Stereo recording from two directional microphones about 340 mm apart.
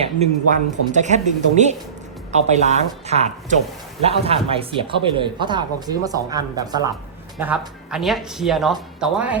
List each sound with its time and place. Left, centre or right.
0.0 s speech: centre